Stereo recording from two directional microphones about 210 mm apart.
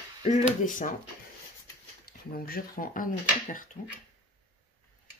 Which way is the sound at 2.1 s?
45° left (ahead or behind).